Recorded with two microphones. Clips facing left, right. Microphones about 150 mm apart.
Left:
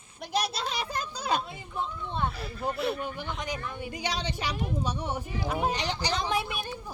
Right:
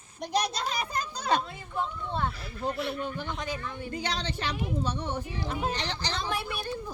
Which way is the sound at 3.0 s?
10° left (ahead or behind).